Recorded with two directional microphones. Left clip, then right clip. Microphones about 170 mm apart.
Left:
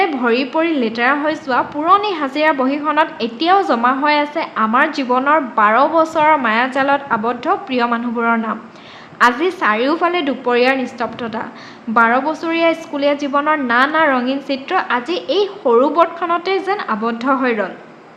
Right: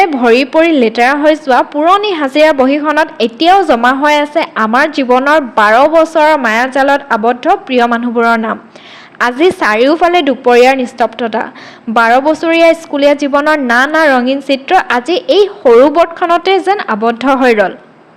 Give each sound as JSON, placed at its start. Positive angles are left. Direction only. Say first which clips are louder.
{"t": 0.0, "sound": "a woman's voice", "louder": "right 8 dB", "side_deg": -40}